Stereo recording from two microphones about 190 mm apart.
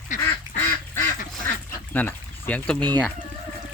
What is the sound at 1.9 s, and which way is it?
Pour, 10° left (ahead or behind).